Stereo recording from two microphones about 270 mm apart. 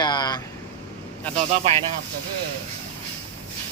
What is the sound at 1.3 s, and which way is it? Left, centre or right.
Speech, right.